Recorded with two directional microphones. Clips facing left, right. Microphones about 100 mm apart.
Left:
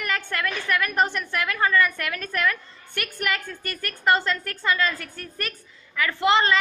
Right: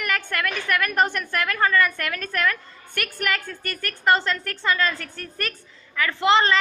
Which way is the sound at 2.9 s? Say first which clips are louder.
Right 1 dB; 45° right (ahead or behind).